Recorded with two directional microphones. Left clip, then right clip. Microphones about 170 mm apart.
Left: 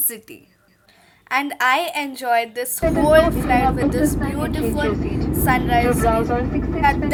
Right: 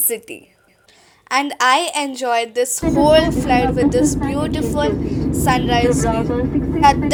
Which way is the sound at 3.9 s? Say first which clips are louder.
Right 4 dB; 75° right (ahead or behind).